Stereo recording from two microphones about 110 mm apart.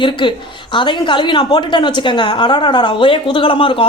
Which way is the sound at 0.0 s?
45° left (ahead or behind).